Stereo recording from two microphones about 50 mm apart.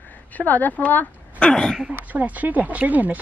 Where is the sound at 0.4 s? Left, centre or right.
Left.